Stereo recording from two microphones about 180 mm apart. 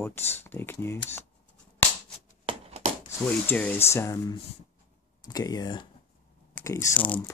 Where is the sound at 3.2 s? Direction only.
10° left (ahead or behind).